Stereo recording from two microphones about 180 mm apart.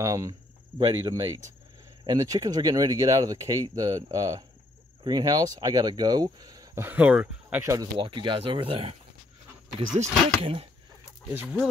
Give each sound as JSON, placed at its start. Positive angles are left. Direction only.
{"t": 0.0, "sound": "speech", "side_deg": -20}
{"t": 7.7, "sound": "speech", "side_deg": -25}